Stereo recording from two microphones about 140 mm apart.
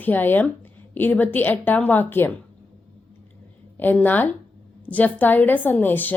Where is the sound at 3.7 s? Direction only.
15° left (ahead or behind).